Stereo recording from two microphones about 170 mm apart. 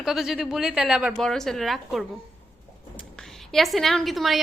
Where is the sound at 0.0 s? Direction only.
Centre (ahead or behind).